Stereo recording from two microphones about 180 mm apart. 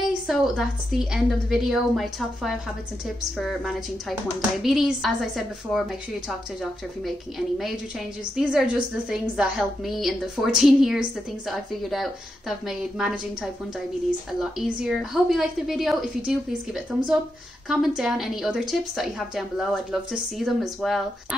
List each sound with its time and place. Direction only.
0.3 s a woman's voice: centre (ahead or behind)